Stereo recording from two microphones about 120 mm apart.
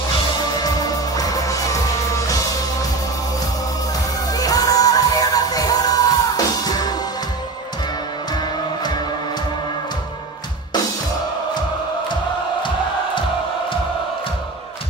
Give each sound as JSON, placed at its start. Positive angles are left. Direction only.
{"t": 1.1, "sound": "music", "side_deg": 30}
{"t": 4.3, "sound": "music", "side_deg": 30}